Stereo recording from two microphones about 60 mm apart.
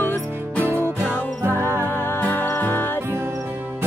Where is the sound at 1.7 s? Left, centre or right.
Right.